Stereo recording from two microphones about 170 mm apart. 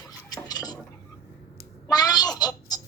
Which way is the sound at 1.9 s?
20° left (ahead or behind).